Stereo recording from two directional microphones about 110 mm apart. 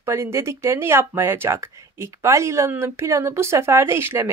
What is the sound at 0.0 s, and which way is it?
A woman's voice, 25° right (ahead or behind).